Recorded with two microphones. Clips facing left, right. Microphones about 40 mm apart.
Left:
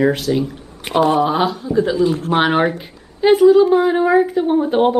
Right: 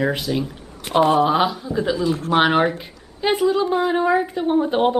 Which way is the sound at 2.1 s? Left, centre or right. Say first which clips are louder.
Left 3 dB; left.